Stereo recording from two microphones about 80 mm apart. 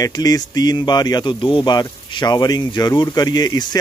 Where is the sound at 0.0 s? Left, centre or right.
Left.